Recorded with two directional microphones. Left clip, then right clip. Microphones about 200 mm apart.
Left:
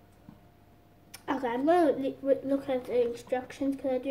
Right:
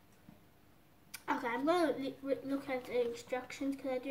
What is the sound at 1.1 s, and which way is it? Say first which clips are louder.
A woman's voice: left 5 dB; 10° right (ahead or behind).